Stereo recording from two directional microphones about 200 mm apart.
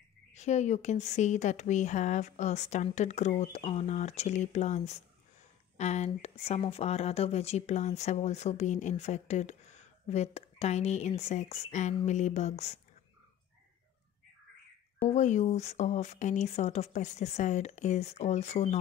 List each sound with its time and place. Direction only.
0.3 s speech: 35° left (ahead or behind)
15.0 s speech: 35° left (ahead or behind)